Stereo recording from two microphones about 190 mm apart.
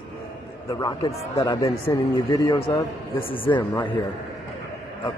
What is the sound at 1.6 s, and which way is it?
Speech, 30° left (ahead or behind).